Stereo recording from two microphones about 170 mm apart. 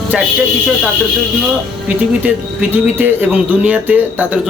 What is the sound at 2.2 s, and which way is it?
A man's voice, 10° right (ahead or behind).